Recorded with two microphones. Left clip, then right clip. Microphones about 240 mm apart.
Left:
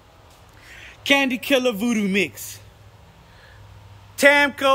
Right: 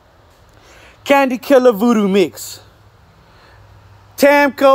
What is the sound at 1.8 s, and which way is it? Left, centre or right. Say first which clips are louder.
Speech: right 9 dB; centre.